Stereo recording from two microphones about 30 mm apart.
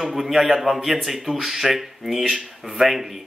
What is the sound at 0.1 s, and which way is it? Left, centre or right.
A man's voice, centre.